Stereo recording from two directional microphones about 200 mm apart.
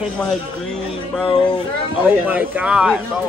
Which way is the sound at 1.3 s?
25° left (ahead or behind).